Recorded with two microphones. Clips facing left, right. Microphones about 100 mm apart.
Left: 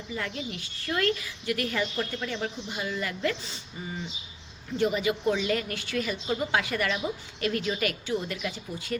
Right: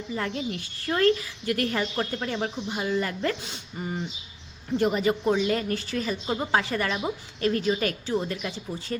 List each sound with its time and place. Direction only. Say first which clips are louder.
0.1 s a woman's voice: right 4 dB; 35° right (ahead or behind)
3.4 s a woman's voice: right 4 dB; 55° right (ahead or behind); by 9.0 s 30° right (ahead or behind)